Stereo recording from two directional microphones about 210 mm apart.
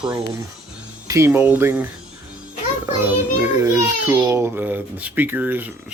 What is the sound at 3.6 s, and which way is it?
A child's voice, 10° right (ahead or behind).